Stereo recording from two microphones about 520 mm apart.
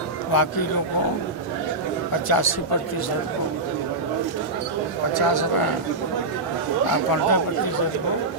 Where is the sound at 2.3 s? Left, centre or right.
Left.